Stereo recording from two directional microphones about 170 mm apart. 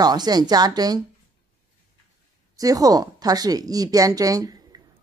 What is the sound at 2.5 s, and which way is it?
Speech, 20° right (ahead or behind).